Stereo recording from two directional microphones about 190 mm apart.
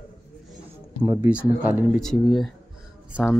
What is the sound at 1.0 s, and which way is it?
Speech, 15° right (ahead or behind).